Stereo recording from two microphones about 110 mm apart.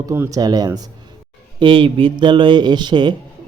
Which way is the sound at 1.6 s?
50° right (ahead or behind).